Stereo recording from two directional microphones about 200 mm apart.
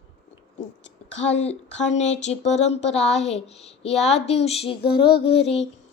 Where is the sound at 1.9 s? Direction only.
35° left (ahead or behind).